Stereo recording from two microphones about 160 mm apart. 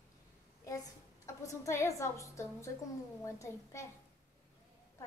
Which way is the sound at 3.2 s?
20° left (ahead or behind).